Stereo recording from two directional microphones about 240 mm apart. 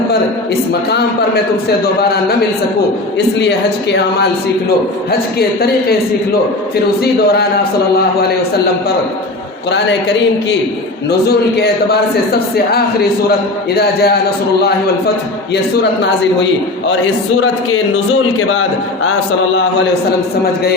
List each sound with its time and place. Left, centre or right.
0.7 s a man's voice: left
5.4 s a man's voice: left
7.0 s a man's voice: left
11.1 s a man's voice: left
18.3 s a man's voice: left